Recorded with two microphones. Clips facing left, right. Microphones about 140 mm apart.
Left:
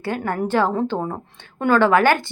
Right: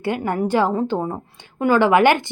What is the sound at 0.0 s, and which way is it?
A woman's voice, 15° right (ahead or behind).